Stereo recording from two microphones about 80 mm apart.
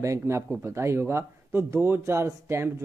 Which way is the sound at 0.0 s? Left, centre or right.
Right.